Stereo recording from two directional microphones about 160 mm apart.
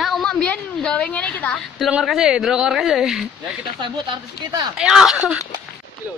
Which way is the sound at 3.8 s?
25° right (ahead or behind).